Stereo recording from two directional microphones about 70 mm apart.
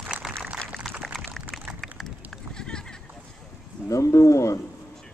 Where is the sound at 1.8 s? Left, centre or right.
Centre.